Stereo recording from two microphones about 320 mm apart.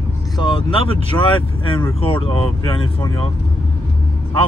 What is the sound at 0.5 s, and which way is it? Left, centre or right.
Speech, centre.